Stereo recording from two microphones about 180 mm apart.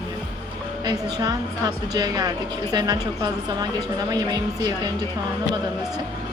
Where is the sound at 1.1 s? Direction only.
20° right (ahead or behind).